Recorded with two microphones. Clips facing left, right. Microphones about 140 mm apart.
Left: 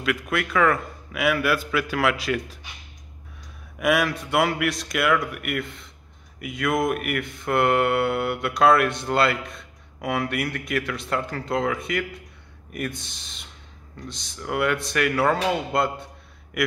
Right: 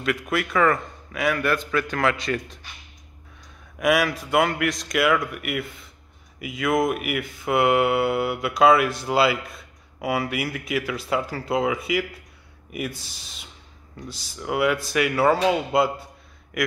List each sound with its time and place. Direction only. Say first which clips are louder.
0.0 s speech: right 1 dB; centre (ahead or behind)
3.8 s a man's voice: right 1 dB; centre (ahead or behind)